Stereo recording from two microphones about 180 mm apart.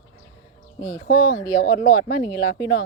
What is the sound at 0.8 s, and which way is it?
Speech, 50° left (ahead or behind).